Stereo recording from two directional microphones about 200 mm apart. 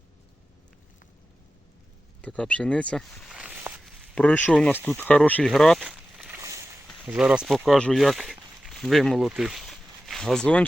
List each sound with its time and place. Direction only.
2.2 s speech: 5° left (ahead or behind)
4.1 s speech: 5° left (ahead or behind)
6.4 s boat: 15° right (ahead or behind)
7.0 s speech: 5° right (ahead or behind)